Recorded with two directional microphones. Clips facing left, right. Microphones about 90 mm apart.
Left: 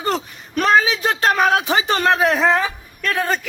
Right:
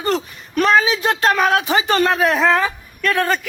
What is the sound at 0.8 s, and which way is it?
Speech, 40° right (ahead or behind).